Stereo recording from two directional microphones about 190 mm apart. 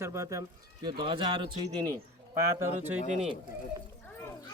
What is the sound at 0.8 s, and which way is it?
Speech, 25° right (ahead or behind).